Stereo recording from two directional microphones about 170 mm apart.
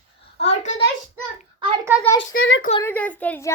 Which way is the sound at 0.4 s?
45° left (ahead or behind).